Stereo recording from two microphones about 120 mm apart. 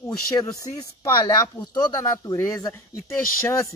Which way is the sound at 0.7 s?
35° left (ahead or behind).